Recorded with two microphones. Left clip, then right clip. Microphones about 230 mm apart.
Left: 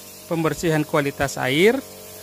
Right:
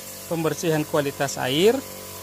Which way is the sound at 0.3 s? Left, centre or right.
Left.